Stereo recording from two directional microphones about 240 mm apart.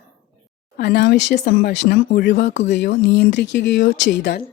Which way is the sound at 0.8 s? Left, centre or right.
Left.